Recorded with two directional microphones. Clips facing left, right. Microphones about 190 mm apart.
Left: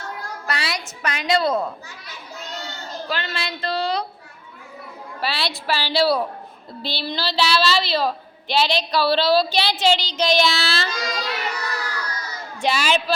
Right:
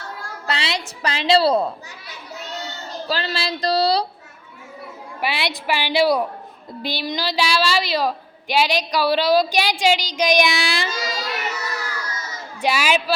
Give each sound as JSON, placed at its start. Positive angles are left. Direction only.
{"t": 0.4, "sound": "a woman's voice", "side_deg": -25}
{"t": 3.1, "sound": "speech", "side_deg": -30}
{"t": 5.2, "sound": "a woman's voice", "side_deg": -15}
{"t": 11.5, "sound": "baby cry", "side_deg": -25}
{"t": 12.5, "sound": "a woman's voice", "side_deg": -10}